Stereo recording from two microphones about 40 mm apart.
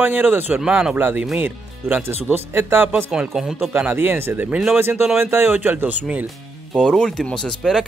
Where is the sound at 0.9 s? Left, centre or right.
Right.